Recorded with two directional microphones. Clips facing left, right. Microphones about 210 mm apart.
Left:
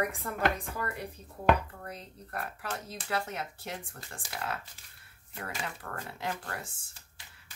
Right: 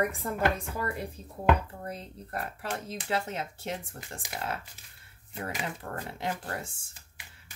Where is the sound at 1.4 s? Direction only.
25° right (ahead or behind).